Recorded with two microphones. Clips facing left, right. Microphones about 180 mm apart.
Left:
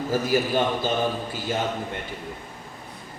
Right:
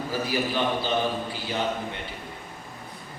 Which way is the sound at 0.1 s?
45° left (ahead or behind).